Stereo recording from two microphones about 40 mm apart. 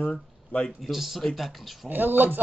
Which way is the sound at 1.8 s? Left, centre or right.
Right.